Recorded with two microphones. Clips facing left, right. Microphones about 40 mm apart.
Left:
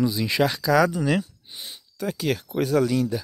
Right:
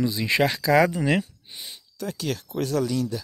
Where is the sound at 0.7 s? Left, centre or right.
Centre.